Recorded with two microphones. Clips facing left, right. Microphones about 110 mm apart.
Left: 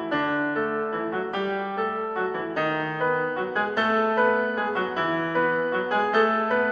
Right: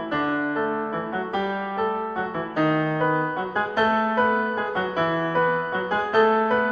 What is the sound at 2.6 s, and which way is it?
Music, 5° right (ahead or behind).